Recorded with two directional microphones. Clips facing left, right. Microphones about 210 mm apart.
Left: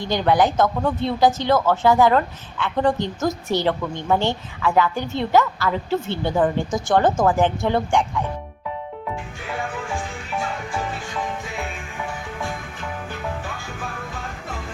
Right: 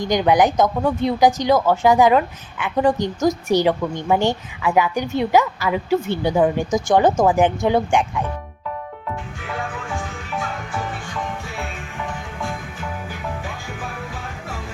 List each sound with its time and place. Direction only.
0.0 s a woman's voice: 15° right (ahead or behind)